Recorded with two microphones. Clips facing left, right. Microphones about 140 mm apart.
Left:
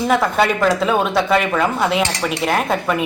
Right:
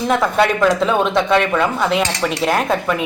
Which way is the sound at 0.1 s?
Centre (ahead or behind).